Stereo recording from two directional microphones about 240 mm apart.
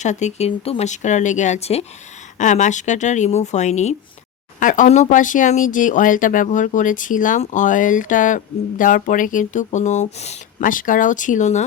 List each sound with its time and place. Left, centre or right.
0.0 s speech: left